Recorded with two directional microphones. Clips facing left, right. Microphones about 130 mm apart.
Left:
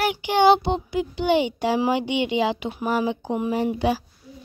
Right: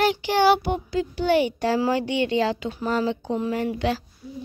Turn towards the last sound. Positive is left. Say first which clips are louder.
# left 2 dB
turn(degrees=15)  # may be behind; listen again after turning